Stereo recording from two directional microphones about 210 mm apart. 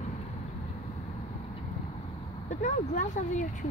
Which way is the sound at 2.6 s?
35° left (ahead or behind).